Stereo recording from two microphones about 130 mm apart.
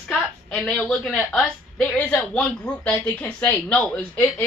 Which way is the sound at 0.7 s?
5° left (ahead or behind).